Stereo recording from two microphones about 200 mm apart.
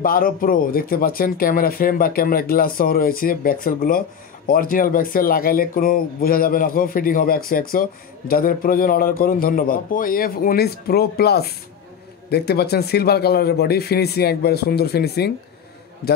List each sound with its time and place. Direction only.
0.0 s speech: 45° left (ahead or behind)